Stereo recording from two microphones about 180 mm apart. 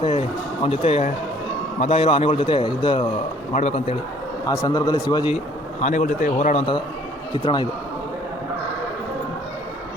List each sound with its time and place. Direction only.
0.0 s a man's voice: 35° left (ahead or behind)
4.4 s a man's voice: 20° left (ahead or behind)
5.8 s speech: 45° left (ahead or behind)
7.3 s a man's voice: 25° left (ahead or behind)